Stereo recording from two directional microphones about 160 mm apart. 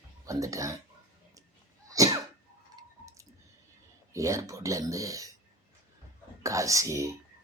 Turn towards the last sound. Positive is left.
turn(degrees=-20)  # may be behind; listen again after turning